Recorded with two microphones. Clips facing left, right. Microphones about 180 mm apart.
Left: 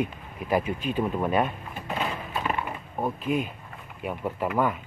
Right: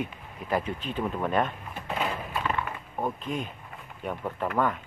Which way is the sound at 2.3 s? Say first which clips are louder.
Left 1 dB; 15° left (ahead or behind).